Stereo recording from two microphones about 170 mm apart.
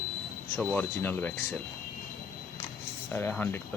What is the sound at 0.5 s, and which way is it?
Speech, 10° left (ahead or behind).